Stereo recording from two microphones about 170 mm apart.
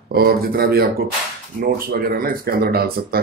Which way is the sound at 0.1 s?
65° right (ahead or behind).